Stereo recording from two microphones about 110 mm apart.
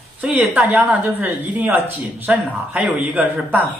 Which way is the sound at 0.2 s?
15° right (ahead or behind).